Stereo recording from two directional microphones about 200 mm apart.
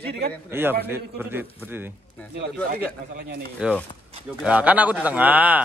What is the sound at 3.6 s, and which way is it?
A man's voice, 5° right (ahead or behind).